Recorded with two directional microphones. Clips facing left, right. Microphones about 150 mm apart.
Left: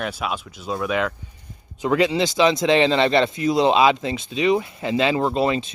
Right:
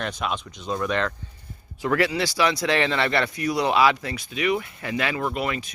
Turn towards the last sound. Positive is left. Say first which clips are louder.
# left 6 dB
turn(degrees=25)  # may be behind; listen again after turning